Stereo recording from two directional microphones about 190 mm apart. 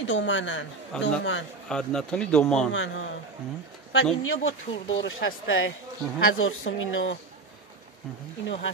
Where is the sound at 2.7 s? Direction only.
90° left.